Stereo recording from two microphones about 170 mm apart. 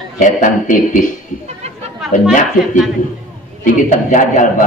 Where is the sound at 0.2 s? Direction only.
50° left (ahead or behind).